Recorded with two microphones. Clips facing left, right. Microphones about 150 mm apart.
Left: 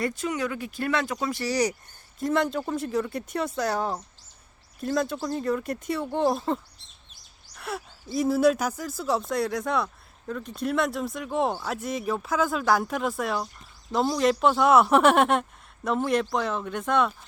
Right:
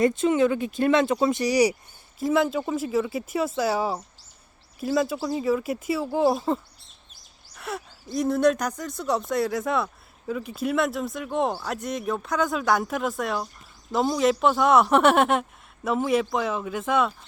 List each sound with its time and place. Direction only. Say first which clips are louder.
0.0 s speech: right 8 dB; 25° right (ahead or behind); by 17.1 s centre (ahead or behind)